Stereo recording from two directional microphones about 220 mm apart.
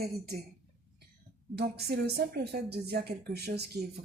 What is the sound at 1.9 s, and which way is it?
Speech, 45° right (ahead or behind).